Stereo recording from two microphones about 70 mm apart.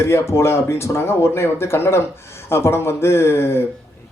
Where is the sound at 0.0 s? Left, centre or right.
Left.